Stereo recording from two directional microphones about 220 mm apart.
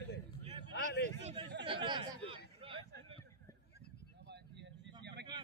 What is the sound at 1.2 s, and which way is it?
Speech, 25° right (ahead or behind).